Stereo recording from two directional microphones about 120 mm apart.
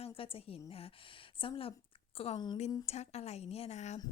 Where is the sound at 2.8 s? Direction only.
60° left (ahead or behind).